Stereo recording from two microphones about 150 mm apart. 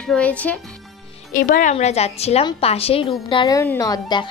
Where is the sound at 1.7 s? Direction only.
45° left (ahead or behind).